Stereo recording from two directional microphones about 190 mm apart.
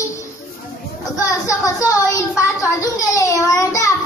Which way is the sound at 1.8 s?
15° left (ahead or behind).